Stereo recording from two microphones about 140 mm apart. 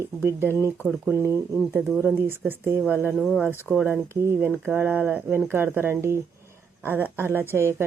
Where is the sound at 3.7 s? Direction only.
15° right (ahead or behind).